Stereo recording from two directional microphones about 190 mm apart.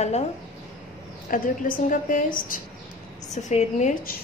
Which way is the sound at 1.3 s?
45° left (ahead or behind).